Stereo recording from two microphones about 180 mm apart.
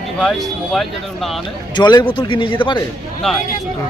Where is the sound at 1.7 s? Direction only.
25° left (ahead or behind).